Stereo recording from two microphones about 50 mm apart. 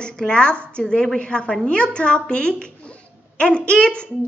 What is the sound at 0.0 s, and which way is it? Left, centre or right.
A woman's voice, centre.